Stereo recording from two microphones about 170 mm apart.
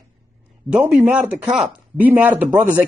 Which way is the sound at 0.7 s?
5° right (ahead or behind).